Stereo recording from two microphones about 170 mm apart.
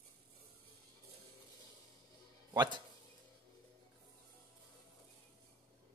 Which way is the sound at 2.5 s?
25° right (ahead or behind).